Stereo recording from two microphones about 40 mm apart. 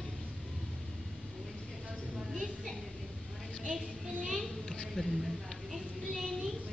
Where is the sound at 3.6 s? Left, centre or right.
Centre.